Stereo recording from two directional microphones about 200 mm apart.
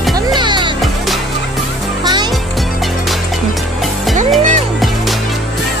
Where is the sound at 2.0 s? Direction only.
20° right (ahead or behind).